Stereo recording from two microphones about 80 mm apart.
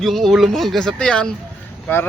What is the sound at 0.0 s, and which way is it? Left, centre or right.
Speech, centre.